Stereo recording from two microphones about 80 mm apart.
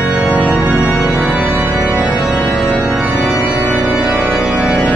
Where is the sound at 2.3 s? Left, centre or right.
Centre.